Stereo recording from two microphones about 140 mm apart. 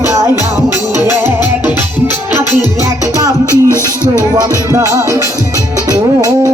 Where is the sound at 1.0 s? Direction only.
20° right (ahead or behind).